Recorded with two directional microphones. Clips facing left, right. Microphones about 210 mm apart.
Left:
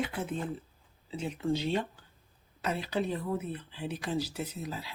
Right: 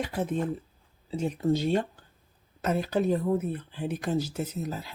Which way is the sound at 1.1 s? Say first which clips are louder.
Right 5 dB; 40° right (ahead or behind).